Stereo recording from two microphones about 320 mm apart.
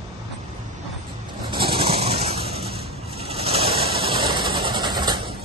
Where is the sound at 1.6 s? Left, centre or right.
Centre.